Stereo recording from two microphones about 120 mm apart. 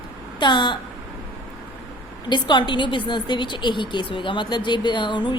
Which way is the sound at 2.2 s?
40° left (ahead or behind).